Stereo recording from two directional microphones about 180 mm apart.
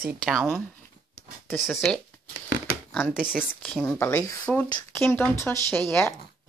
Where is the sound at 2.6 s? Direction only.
5° left (ahead or behind).